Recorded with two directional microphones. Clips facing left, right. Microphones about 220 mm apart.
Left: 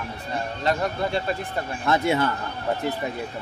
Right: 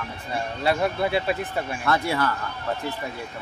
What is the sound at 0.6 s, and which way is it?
Speech, 10° right (ahead or behind).